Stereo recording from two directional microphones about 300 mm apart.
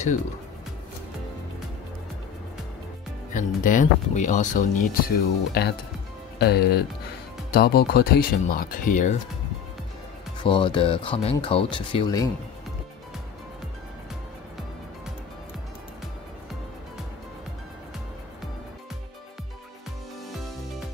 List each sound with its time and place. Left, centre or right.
3.3 s speech: left
10.4 s speech: centre